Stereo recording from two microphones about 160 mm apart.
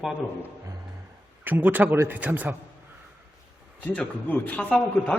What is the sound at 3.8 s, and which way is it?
A man's voice, 10° left (ahead or behind).